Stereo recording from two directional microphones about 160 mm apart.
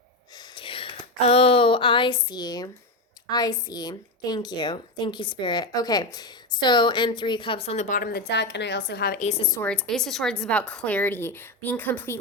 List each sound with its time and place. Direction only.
0.3 s a sound: 35° left (ahead or behind)
3.2 s a woman's voice: 25° left (ahead or behind); by 7.9 s 40° left (ahead or behind)
7.9 s a woman's voice: 80° left
9.1 s a woman's voice: 45° left (ahead or behind)
9.6 s a woman's voice: 5° left (ahead or behind)